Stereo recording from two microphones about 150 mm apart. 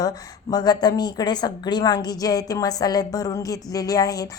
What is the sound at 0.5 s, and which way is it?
A woman's voice, 25° left (ahead or behind).